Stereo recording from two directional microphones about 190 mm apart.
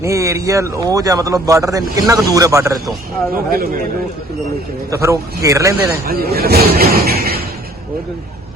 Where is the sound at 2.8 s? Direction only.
Centre (ahead or behind).